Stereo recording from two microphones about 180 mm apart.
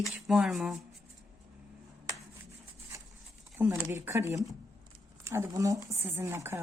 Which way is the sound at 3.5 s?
10° right (ahead or behind).